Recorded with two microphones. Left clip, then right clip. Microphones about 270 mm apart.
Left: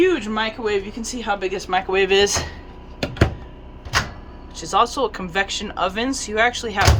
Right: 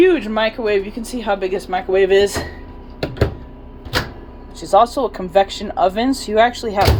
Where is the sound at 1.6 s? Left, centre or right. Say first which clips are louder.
Right 3 dB; centre.